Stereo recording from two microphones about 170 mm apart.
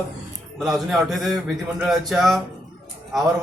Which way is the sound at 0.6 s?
Centre (ahead or behind).